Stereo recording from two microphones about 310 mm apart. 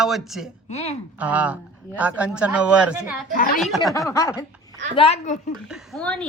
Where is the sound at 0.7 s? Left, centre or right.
Left.